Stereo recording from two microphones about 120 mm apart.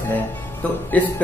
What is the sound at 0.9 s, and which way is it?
Speech, 15° left (ahead or behind).